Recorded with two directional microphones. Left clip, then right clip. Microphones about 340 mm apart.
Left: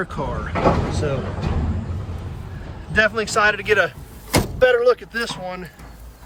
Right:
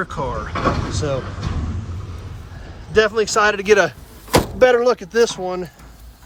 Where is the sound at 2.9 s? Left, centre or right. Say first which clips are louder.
Right 2 dB; centre.